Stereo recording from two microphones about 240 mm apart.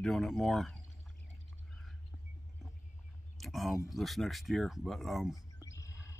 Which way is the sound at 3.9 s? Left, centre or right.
Centre.